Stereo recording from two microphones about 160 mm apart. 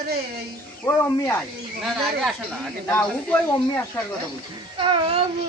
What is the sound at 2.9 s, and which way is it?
Speech, 10° left (ahead or behind).